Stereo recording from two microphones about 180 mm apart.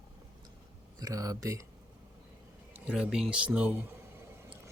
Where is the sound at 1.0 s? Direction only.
20° right (ahead or behind).